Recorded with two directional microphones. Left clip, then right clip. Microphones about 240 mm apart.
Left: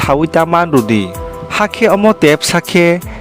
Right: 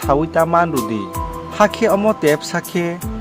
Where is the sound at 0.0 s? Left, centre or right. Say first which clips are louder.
Left 4 dB; left.